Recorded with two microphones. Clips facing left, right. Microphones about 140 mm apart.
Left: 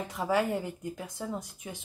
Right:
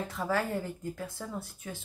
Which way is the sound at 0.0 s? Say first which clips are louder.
Left 3 dB; 15° left (ahead or behind).